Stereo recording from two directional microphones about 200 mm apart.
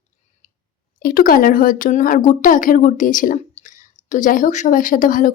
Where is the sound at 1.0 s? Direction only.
45° left (ahead or behind).